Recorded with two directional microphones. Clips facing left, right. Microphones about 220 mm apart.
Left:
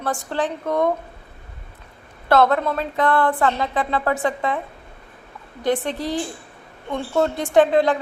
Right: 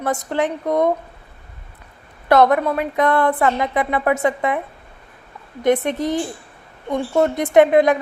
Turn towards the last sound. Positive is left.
turn(degrees=-15)  # may be behind; listen again after turning